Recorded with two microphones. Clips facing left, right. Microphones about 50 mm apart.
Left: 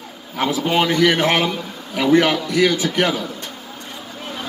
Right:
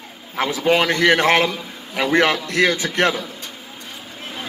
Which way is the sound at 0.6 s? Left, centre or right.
Right.